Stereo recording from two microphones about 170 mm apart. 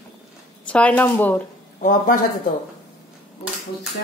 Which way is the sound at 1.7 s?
50° left (ahead or behind).